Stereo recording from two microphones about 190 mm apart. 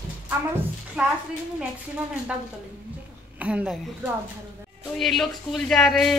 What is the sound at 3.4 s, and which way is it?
Speech, 5° right (ahead or behind).